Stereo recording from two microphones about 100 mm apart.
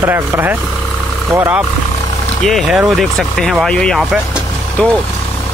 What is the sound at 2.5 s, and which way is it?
Speech, 5° right (ahead or behind).